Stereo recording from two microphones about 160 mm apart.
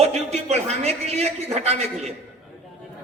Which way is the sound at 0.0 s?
40° right (ahead or behind).